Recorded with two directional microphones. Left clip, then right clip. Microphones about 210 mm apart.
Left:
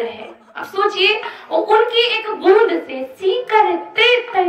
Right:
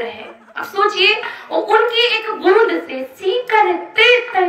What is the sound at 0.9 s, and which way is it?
A woman's voice, 50° left (ahead or behind).